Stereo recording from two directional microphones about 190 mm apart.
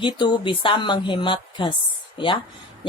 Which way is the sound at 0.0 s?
25° left (ahead or behind).